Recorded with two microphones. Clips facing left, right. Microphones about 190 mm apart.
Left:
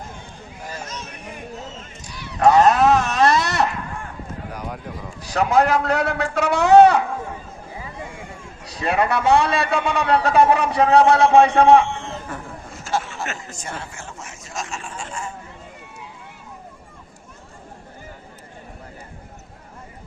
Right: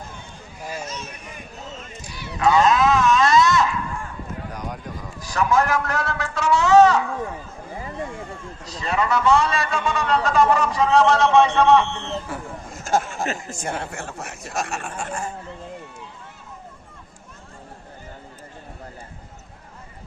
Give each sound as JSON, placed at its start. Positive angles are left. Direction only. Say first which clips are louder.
{"t": 2.4, "sound": "sheep", "louder": "left 3 dB", "side_deg": 65}
{"t": 5.2, "sound": "a man's voice", "louder": "left 3 dB", "side_deg": 60}
{"t": 8.8, "sound": "a man's voice", "louder": "left 2 dB", "side_deg": 60}
{"t": 12.3, "sound": "speech", "louder": "right 1 dB", "side_deg": -10}
{"t": 12.7, "sound": "a sound", "louder": "right 3 dB", "side_deg": -50}
{"t": 13.5, "sound": "speech", "louder": "right 5 dB", "side_deg": -55}